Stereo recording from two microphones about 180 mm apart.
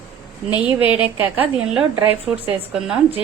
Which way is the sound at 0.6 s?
5° right (ahead or behind).